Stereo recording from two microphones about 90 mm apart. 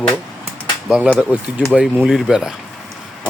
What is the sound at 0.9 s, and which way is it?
Speech, 10° right (ahead or behind).